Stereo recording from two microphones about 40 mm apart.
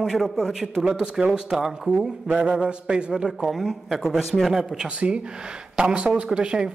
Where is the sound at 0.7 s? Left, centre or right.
Centre.